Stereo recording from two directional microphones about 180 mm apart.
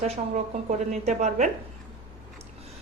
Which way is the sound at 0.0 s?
40° right (ahead or behind).